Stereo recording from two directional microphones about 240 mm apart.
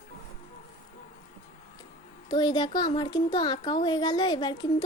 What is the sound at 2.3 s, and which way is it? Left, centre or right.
Speech, centre.